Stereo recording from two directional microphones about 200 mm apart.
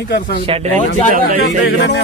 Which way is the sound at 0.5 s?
25° right (ahead or behind).